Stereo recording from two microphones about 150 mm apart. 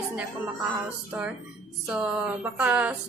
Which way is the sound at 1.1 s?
15° right (ahead or behind).